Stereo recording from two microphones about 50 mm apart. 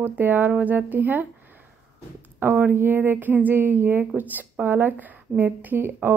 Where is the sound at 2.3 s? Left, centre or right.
Right.